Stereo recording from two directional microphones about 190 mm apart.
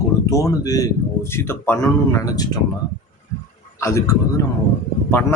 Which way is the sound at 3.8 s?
15° left (ahead or behind).